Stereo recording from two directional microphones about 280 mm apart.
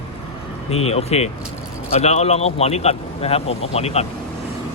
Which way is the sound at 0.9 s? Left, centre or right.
Left.